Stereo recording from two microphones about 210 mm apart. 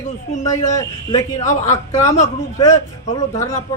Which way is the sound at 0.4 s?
15° left (ahead or behind).